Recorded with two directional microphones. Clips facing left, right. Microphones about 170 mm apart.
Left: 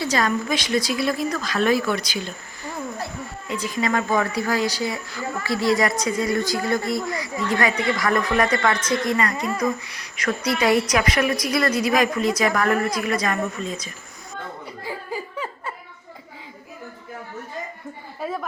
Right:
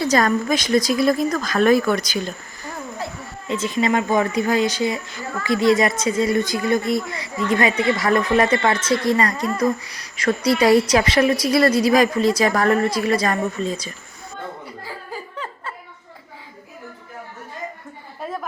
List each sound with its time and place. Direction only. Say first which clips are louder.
0.0 s speech: right 4 dB; 45° right (ahead or behind)
3.5 s a woman's voice: right 4 dB; 25° right (ahead or behind)
14.8 s laughter: left 5 dB; 10° left (ahead or behind)
18.2 s a woman's voice: left 1 dB; 5° left (ahead or behind)